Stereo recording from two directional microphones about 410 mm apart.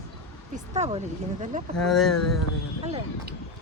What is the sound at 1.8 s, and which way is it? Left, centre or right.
Speech, centre.